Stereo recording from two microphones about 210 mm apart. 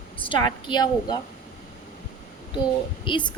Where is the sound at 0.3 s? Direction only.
20° left (ahead or behind).